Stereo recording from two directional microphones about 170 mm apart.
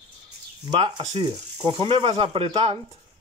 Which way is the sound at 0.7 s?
35° right (ahead or behind).